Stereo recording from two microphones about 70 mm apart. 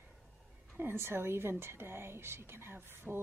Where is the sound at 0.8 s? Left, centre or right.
Right.